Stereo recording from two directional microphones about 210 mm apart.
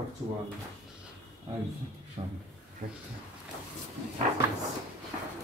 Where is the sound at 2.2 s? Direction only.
30° right (ahead or behind).